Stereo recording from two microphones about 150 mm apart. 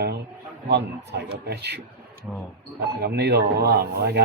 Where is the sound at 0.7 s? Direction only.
90° right.